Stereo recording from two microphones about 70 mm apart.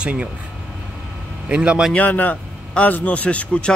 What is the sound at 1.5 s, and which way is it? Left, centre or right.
Speech, centre.